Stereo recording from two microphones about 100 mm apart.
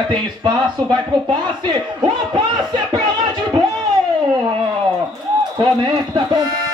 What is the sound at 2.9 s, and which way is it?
Music, 50° right (ahead or behind).